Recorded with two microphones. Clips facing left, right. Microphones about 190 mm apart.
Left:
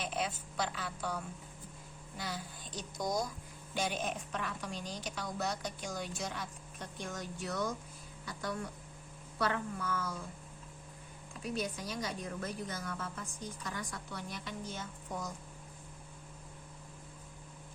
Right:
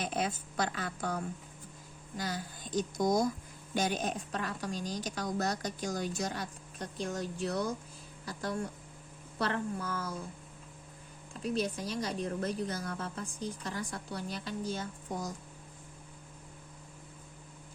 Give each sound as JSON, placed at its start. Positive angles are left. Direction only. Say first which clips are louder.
{"t": 0.0, "sound": "a woman's voice", "louder": "right 3 dB", "side_deg": -45}
{"t": 3.8, "sound": "a woman's voice", "louder": "right 4 dB", "side_deg": -40}
{"t": 11.5, "sound": "a woman's voice", "louder": "right 4 dB", "side_deg": -35}